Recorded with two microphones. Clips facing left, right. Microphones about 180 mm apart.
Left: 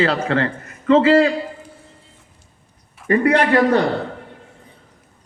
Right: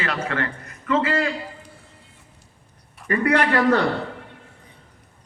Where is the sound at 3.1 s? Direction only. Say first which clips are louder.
Left 5 dB; 25° left (ahead or behind).